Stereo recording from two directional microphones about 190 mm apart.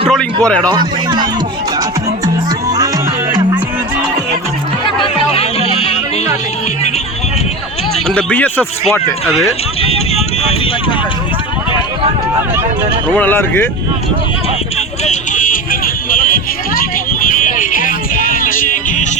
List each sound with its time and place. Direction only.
0.1 s a sound: 5° left (ahead or behind)
2.2 s music: 20° right (ahead or behind)
4.9 s music: 30° left (ahead or behind)
8.0 s speech: 5° left (ahead or behind)
10.2 s vehicle: 30° left (ahead or behind)
13.1 s speech: 10° left (ahead or behind)
15.0 s a sound: 40° left (ahead or behind)
17.2 s music: 45° left (ahead or behind)